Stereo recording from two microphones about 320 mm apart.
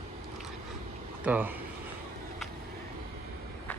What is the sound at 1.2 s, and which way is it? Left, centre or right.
Speech, centre.